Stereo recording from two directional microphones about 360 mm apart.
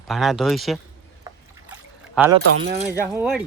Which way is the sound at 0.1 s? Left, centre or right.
Centre.